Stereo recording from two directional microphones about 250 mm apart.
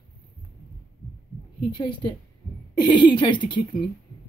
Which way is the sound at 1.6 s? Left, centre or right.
Centre.